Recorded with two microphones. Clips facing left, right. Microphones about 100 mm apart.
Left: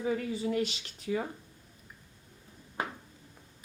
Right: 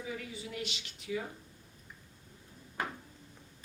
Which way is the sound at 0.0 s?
40° left (ahead or behind).